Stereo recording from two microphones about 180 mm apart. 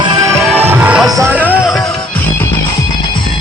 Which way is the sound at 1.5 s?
5° right (ahead or behind).